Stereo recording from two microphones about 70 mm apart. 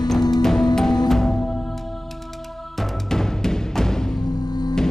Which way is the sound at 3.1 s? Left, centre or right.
Centre.